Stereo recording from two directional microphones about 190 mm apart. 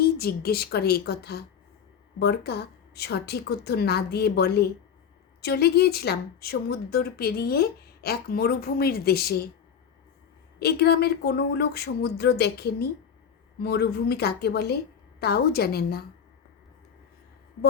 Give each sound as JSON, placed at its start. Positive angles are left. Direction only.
{"t": 0.0, "sound": "speech", "side_deg": 55}
{"t": 10.6, "sound": "speech", "side_deg": 60}